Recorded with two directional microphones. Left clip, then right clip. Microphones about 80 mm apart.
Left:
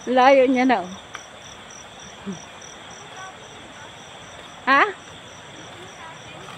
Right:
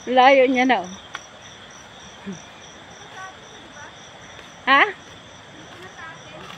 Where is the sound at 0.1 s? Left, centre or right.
Left.